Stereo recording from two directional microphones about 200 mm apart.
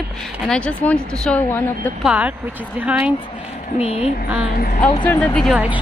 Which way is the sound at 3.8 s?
30° left (ahead or behind).